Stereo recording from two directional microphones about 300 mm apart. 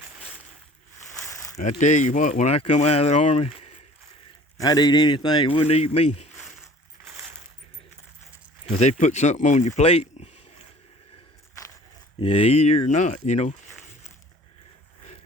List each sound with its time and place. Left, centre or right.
1.8 s a man's voice: left
7.1 s coin: centre
8.7 s speech: left
12.5 s speech: left